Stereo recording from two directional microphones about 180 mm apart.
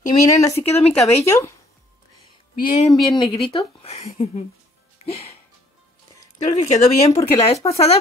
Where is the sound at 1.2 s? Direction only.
15° left (ahead or behind).